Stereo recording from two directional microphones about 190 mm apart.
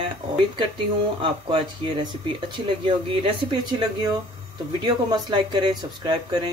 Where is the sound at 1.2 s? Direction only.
25° right (ahead or behind).